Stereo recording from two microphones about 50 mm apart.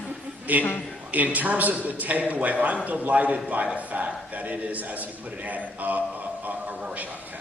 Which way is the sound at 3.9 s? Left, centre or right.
Right.